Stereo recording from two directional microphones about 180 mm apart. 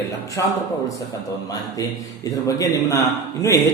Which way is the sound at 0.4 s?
15° left (ahead or behind).